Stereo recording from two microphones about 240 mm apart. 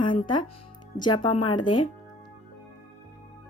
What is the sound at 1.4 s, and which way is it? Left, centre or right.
Speech, left.